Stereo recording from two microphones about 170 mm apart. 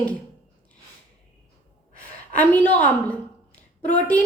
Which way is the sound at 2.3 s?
10° left (ahead or behind).